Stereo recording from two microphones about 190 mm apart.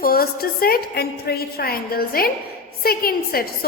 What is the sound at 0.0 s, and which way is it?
A woman's voice, 50° left (ahead or behind).